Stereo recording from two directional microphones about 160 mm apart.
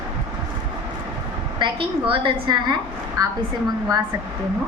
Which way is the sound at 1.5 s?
30° right (ahead or behind).